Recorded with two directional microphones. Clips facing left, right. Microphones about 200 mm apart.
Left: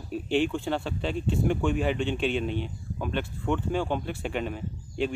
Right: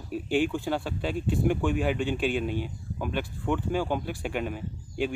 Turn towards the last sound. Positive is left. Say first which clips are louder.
# left 1 dB
turn(degrees=-5)  # may be behind; listen again after turning